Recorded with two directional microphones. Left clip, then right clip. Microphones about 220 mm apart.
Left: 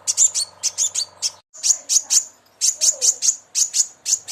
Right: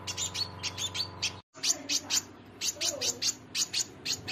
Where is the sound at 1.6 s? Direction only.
Centre (ahead or behind).